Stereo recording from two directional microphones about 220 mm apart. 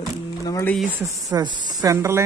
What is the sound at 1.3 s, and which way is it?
Speech, 20° right (ahead or behind).